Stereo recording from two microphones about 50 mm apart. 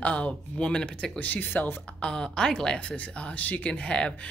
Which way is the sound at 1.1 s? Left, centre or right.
Left.